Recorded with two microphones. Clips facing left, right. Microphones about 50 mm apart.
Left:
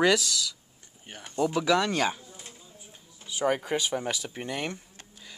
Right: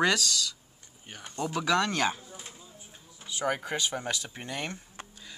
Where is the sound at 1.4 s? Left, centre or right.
Centre.